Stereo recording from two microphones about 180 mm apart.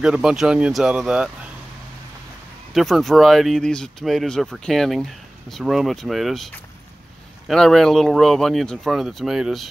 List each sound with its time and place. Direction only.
0.0 s speech: 5° right (ahead or behind)
2.7 s speech: centre (ahead or behind)